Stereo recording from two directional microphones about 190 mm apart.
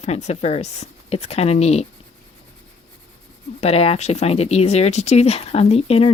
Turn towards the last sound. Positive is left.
turn(degrees=30)  # may be behind; listen again after turning